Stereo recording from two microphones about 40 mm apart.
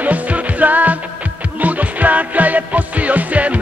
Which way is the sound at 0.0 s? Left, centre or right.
Right.